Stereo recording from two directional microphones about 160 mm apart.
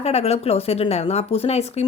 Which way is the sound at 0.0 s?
40° left (ahead or behind).